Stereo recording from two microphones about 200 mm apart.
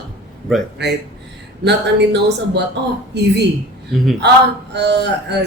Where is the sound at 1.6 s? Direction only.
60° right (ahead or behind).